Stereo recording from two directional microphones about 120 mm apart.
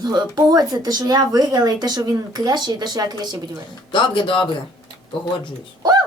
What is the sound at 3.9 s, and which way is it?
Speech, 40° left (ahead or behind).